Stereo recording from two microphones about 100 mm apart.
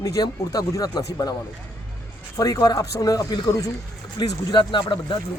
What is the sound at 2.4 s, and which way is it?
Speech, 35° left (ahead or behind).